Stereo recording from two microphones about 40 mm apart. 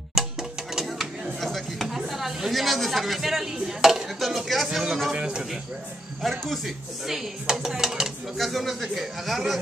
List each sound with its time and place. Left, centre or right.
0.1 s music: centre
1.4 s chopping: centre
2.0 s speech: centre
4.2 s speech: centre
5.1 s a man's voice: right
6.4 s speech: centre
7.1 s speech: centre
8.4 s speech: centre